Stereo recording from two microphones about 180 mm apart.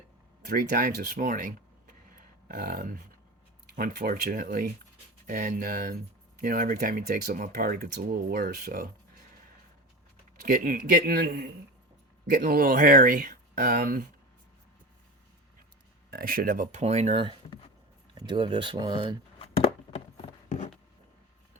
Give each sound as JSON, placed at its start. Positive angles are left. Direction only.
{"t": 0.4, "sound": "speech", "side_deg": -50}
{"t": 10.4, "sound": "speech", "side_deg": -50}
{"t": 16.0, "sound": "speech", "side_deg": -55}